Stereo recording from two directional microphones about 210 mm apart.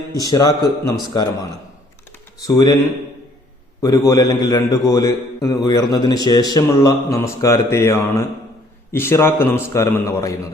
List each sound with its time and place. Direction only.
0.1 s a man's voice: 15° left (ahead or behind)
2.5 s a man's voice: 15° left (ahead or behind)
3.8 s a man's voice: 15° left (ahead or behind)